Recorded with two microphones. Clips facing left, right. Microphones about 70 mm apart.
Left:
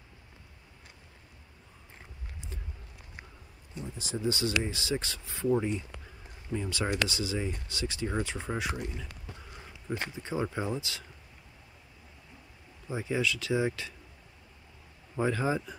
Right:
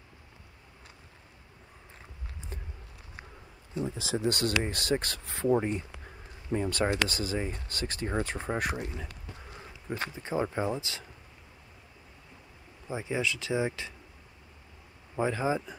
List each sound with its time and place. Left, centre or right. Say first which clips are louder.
2.5 s a sound: right 3 dB; right
3.8 s speech: right 3 dB; right
5.5 s speech: right 1 dB; right
9.8 s speech: right 1 dB; right
12.8 s speech: left 1 dB; right
15.1 s speech: even; centre